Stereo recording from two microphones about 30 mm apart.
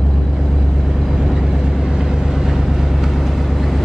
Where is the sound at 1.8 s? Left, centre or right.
Right.